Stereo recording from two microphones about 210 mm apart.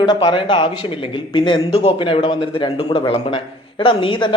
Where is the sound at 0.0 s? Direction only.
20° left (ahead or behind).